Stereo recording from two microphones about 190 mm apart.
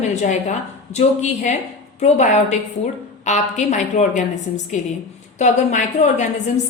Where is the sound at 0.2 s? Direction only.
35° left (ahead or behind).